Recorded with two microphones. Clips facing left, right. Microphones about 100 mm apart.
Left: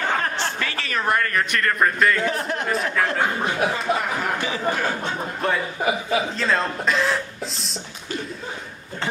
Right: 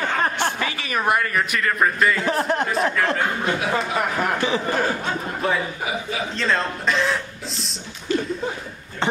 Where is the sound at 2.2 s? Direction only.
35° right (ahead or behind).